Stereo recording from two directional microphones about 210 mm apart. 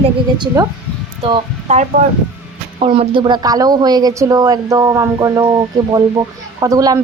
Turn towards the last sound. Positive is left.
turn(degrees=-15)  # may be behind; listen again after turning